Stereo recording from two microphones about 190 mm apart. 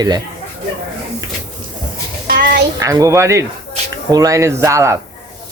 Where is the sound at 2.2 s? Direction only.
50° right (ahead or behind).